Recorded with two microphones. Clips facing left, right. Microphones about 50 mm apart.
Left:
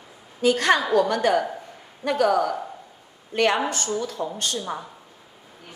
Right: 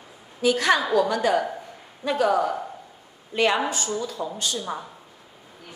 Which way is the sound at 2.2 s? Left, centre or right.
Right.